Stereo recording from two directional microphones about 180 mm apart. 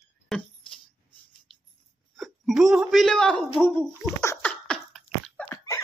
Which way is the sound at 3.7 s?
15° left (ahead or behind).